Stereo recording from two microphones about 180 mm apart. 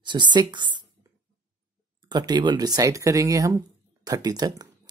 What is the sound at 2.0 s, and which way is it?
Speech, 25° right (ahead or behind).